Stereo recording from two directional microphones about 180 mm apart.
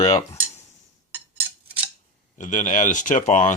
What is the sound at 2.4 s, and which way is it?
Speech, 45° left (ahead or behind).